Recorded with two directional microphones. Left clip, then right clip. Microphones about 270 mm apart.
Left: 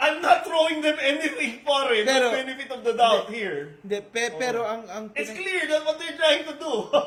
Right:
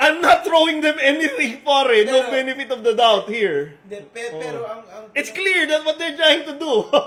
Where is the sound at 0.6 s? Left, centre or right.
Right.